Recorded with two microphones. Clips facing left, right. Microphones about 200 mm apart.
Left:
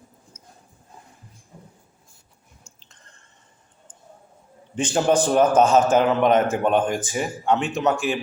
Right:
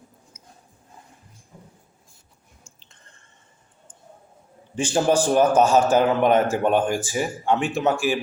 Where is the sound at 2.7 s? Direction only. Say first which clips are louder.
Even; 30° right (ahead or behind).